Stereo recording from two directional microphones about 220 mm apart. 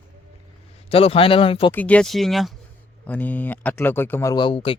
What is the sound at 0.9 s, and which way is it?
Speech, 25° left (ahead or behind).